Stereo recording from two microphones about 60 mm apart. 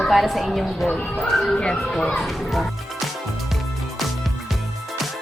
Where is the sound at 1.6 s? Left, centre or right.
Centre.